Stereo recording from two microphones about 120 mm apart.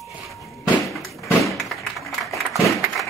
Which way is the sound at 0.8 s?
Centre (ahead or behind).